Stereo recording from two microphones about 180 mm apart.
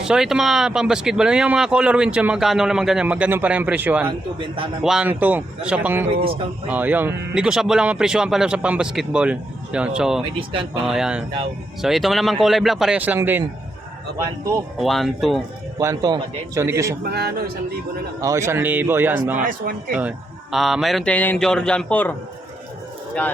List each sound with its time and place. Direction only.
0.0 s speech: 5° right (ahead or behind)
4.4 s a man's voice: 30° right (ahead or behind)
4.8 s a man's voice: 5° right (ahead or behind)
14.8 s speech: centre (ahead or behind)
15.8 s a man's voice: 20° right (ahead or behind)
17.0 s a man's voice: 60° right (ahead or behind)
18.2 s a man's voice: 15° right (ahead or behind); by 22.1 s 5° left (ahead or behind)